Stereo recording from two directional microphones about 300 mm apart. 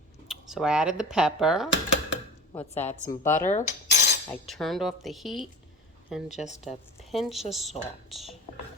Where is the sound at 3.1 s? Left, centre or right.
Centre.